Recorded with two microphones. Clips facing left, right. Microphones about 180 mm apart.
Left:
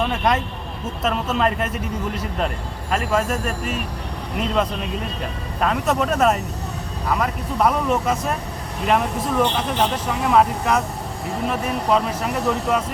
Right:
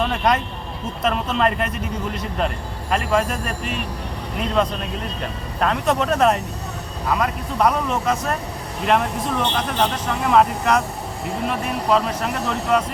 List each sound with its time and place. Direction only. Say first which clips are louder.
0.0 s speech: right 1 dB; centre (ahead or behind)
2.9 s speech: right 1 dB; 5° left (ahead or behind)